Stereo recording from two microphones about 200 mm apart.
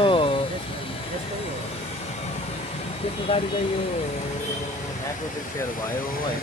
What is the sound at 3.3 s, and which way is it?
Speech, 30° left (ahead or behind).